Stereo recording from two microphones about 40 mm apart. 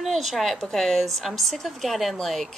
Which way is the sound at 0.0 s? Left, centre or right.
Centre.